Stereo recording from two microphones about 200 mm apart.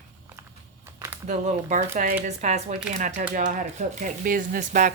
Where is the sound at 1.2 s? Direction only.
35° right (ahead or behind).